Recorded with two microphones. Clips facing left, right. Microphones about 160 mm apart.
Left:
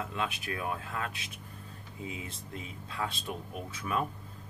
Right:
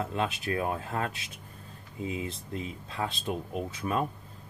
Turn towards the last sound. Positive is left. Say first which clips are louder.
# right 4 dB
turn(degrees=-30)  # may be behind; listen again after turning